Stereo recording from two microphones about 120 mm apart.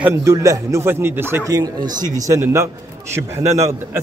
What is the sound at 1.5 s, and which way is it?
A man's voice, 35° right (ahead or behind).